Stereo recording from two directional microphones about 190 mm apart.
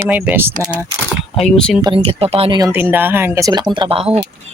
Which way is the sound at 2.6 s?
10° right (ahead or behind).